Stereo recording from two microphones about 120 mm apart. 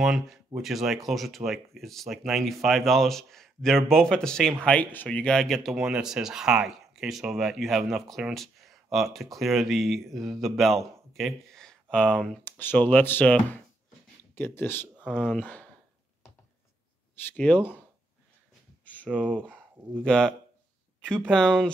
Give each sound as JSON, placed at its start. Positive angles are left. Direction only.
{"t": 0.0, "sound": "speech", "side_deg": -5}
{"t": 17.3, "sound": "speech", "side_deg": 15}
{"t": 19.0, "sound": "speech", "side_deg": -10}
{"t": 20.0, "sound": "speech", "side_deg": 5}